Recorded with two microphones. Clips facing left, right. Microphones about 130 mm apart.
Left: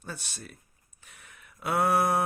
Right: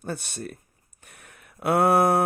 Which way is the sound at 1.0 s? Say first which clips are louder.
Right 3 dB; 55° right (ahead or behind).